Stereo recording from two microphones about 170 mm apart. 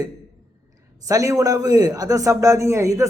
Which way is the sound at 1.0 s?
20° right (ahead or behind).